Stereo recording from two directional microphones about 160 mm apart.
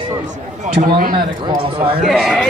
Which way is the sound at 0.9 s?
70° right (ahead or behind).